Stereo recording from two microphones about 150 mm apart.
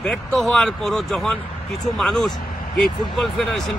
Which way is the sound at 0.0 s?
5° left (ahead or behind).